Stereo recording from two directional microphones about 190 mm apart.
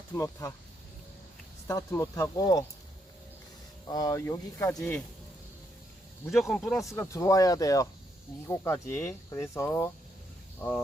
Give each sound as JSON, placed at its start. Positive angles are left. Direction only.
{"t": 0.1, "sound": "speech", "side_deg": 15}
{"t": 1.6, "sound": "speech", "side_deg": 15}
{"t": 3.8, "sound": "speech", "side_deg": 20}
{"t": 6.3, "sound": "speech", "side_deg": 0}